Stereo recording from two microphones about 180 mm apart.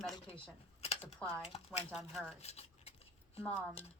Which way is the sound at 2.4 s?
35° left (ahead or behind).